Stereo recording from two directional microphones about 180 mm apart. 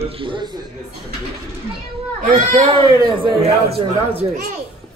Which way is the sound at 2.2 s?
45° right (ahead or behind).